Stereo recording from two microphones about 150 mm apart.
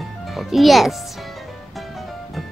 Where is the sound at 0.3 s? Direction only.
Centre (ahead or behind).